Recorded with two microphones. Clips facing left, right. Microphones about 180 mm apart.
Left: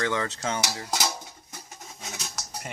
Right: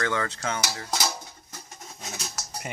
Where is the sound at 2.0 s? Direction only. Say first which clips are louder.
Right 1 dB; centre (ahead or behind).